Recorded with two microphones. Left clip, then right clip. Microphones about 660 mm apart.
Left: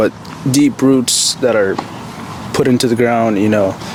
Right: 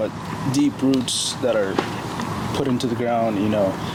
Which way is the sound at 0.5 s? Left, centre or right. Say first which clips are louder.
Left 9 dB; left.